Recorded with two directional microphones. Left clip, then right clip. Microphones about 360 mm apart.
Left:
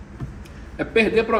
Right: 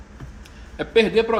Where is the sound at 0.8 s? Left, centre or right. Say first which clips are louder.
Right 1 dB; right.